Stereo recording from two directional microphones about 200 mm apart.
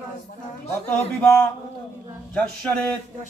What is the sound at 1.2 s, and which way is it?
A man's voice, 10° left (ahead or behind).